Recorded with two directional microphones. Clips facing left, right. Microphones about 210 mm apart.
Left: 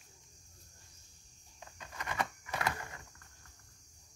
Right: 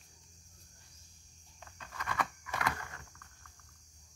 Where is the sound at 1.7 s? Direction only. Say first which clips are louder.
Even; 20° left (ahead or behind).